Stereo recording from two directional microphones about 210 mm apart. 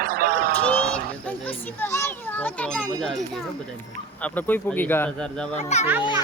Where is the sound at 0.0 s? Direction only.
45° right (ahead or behind).